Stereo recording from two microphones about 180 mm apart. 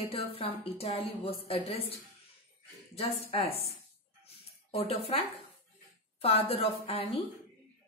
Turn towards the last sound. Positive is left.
turn(degrees=30)  # may be behind; listen again after turning